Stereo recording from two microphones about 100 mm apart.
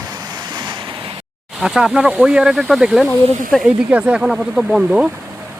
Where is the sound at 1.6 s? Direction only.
5° right (ahead or behind).